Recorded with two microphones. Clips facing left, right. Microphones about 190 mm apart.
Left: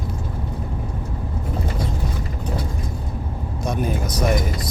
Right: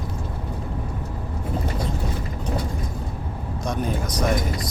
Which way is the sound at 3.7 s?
5° left (ahead or behind).